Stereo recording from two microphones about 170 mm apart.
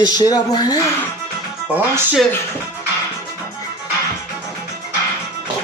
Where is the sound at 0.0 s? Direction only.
25° left (ahead or behind).